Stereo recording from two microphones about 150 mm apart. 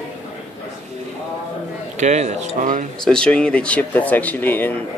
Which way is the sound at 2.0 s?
50° right (ahead or behind).